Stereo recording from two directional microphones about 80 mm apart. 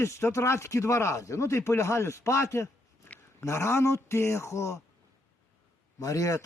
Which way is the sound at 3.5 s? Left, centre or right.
Left.